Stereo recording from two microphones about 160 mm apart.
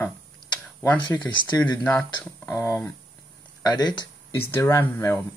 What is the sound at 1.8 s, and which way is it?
Speech, 10° left (ahead or behind).